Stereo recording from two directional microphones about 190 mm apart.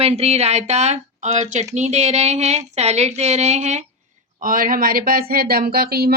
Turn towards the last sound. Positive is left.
turn(degrees=-55)  # may be behind; listen again after turning